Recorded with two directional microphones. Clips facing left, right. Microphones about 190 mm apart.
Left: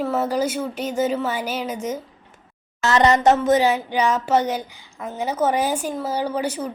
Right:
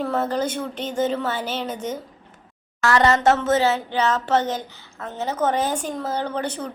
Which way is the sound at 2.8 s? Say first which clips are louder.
Left 1 dB; 20° left (ahead or behind).